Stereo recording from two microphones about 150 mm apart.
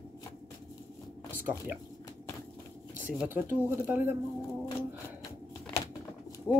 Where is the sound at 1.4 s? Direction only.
10° right (ahead or behind).